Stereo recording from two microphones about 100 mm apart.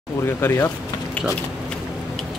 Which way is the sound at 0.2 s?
25° left (ahead or behind).